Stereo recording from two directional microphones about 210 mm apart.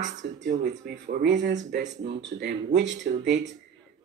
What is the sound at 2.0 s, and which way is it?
A man's voice, 55° right (ahead or behind).